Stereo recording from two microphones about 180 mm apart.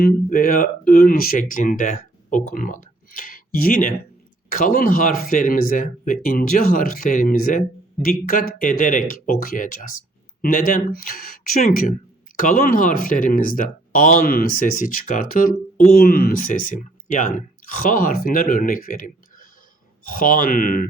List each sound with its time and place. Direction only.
0.0 s speech: 55° left (ahead or behind)